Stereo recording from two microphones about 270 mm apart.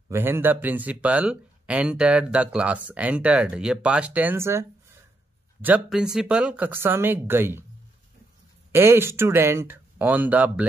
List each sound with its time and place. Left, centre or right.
0.1 s speech: centre
8.7 s speech: centre